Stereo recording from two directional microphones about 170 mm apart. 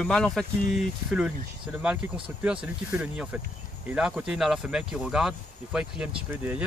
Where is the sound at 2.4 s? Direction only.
5° right (ahead or behind).